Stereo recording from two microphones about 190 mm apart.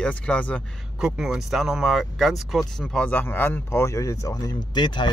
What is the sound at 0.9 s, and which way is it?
Speech, 5° right (ahead or behind).